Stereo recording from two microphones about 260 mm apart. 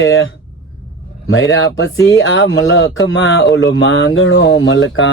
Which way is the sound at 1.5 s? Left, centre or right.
Left.